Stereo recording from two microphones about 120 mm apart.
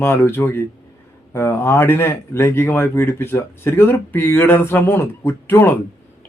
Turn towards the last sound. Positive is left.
turn(degrees=20)  # may be behind; listen again after turning